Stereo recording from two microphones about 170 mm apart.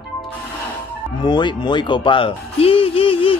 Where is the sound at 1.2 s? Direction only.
25° left (ahead or behind).